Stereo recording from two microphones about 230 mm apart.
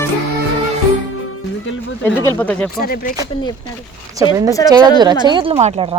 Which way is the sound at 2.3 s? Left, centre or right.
Centre.